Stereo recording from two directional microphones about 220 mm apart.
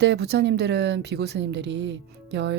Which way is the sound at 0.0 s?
50° right (ahead or behind).